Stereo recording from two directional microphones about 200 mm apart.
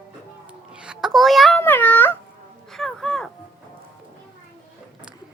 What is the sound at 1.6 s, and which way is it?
Speech, 10° left (ahead or behind).